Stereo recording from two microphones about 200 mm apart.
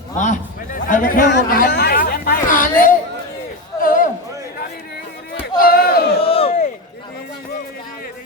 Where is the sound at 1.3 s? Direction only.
55° left (ahead or behind).